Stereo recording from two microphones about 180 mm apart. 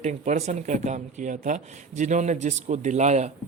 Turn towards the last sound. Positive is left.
turn(degrees=-40)  # may be behind; listen again after turning